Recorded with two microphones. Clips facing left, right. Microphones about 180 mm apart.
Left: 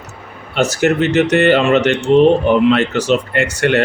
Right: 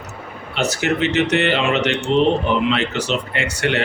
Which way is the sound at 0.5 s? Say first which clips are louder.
Left 6 dB; 45° left (ahead or behind).